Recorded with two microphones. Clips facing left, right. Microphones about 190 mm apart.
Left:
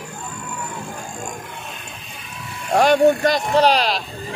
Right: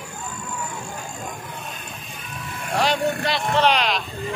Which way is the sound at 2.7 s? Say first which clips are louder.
Left 8 dB; 50° left (ahead or behind).